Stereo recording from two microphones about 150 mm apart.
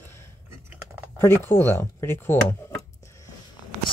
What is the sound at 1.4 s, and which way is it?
Speech, 15° left (ahead or behind).